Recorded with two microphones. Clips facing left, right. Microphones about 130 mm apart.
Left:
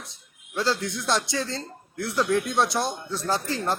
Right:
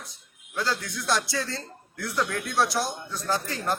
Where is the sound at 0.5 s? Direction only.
25° left (ahead or behind).